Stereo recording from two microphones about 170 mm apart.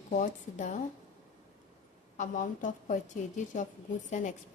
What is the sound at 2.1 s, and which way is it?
A woman's voice, 50° left (ahead or behind).